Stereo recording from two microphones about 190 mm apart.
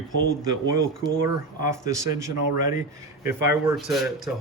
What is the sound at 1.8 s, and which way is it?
Speech, 15° right (ahead or behind).